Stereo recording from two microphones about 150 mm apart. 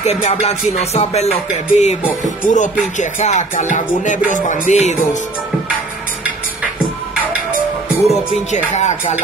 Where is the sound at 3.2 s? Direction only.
50° left (ahead or behind).